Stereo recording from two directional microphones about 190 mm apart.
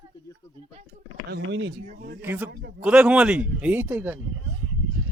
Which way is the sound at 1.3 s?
65° right (ahead or behind).